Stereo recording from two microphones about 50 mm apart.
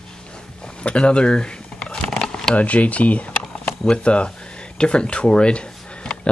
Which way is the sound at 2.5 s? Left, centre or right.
Left.